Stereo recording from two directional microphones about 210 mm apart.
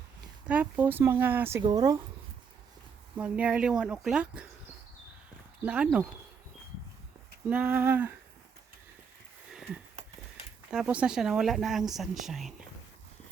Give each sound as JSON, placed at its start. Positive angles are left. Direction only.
{"t": 0.4, "sound": "speech", "side_deg": -5}
{"t": 3.2, "sound": "speech", "side_deg": -5}
{"t": 5.6, "sound": "speech", "side_deg": -5}
{"t": 7.4, "sound": "speech", "side_deg": -5}
{"t": 9.5, "sound": "sniff", "side_deg": 0}
{"t": 10.7, "sound": "speech", "side_deg": -5}